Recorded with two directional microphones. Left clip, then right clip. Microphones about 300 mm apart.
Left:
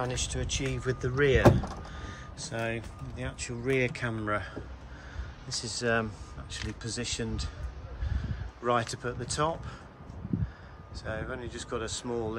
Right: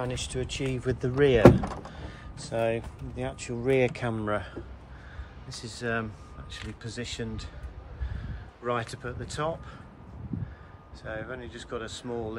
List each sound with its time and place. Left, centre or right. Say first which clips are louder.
0.0 s speech: right 1 dB; centre
1.4 s speech: right 5 dB; right
2.0 s speech: left 1 dB; centre
5.6 s speech: left 3 dB; centre
8.6 s speech: left 2 dB; centre
11.1 s speech: even; centre